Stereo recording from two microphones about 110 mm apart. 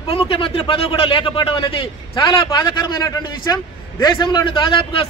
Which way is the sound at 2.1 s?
35° left (ahead or behind).